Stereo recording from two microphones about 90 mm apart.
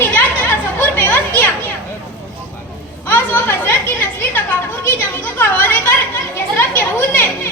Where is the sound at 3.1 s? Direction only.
20° left (ahead or behind).